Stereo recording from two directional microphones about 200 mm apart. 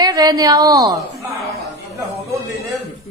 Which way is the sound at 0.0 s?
20° right (ahead or behind).